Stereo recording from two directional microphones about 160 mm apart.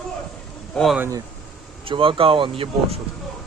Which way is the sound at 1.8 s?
35° right (ahead or behind).